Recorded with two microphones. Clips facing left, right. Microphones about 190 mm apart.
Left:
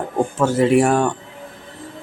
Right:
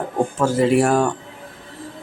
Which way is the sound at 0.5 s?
5° left (ahead or behind).